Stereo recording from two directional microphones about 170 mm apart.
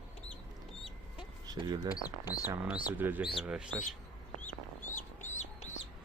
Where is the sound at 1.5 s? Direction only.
25° right (ahead or behind).